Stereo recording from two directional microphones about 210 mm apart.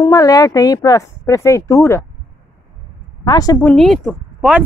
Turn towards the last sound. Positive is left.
turn(degrees=0)  # may be behind; listen again after turning